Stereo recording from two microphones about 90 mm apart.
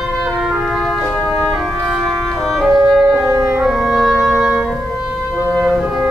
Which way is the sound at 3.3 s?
35° right (ahead or behind).